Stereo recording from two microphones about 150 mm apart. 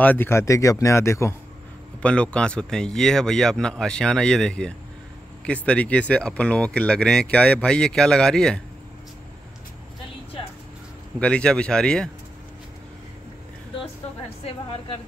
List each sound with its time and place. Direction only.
0.0 s speech: 15° left (ahead or behind)
2.0 s speech: 5° left (ahead or behind)
11.1 s speech: 5° left (ahead or behind)